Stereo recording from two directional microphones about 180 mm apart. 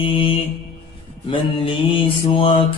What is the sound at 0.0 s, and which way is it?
Mantra, 30° left (ahead or behind).